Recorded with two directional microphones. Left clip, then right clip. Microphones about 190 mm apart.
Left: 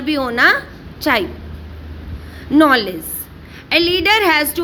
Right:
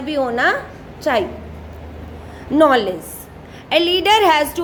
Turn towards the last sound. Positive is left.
turn(degrees=5)  # may be behind; listen again after turning